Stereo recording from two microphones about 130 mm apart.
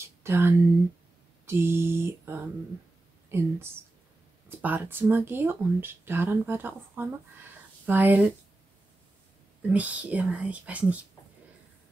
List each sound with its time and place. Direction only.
0.0 s a sound: 20° right (ahead or behind)
3.3 s speech: 20° right (ahead or behind)
9.7 s speech: 10° right (ahead or behind)